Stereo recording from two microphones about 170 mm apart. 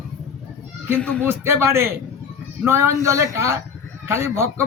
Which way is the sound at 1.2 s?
15° right (ahead or behind).